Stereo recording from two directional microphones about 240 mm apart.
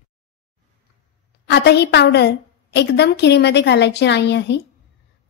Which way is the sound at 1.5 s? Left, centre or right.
Left.